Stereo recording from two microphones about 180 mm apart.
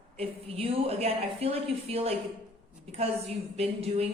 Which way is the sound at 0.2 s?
35° right (ahead or behind).